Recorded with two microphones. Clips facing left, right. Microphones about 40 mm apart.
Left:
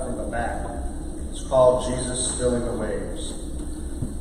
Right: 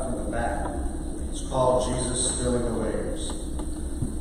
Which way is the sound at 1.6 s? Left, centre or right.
Centre.